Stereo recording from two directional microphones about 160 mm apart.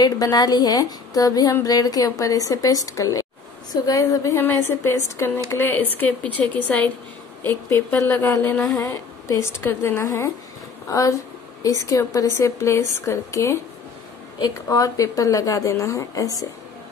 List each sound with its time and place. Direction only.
0.0 s a woman's voice: 25° left (ahead or behind)